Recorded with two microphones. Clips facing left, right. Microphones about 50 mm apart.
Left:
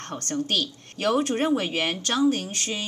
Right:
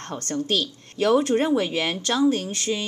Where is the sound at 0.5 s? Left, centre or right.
Left.